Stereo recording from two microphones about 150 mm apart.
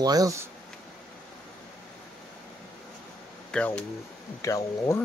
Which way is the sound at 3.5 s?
5° left (ahead or behind).